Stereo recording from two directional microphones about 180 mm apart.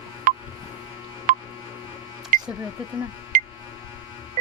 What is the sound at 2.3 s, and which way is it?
Music, 50° right (ahead or behind).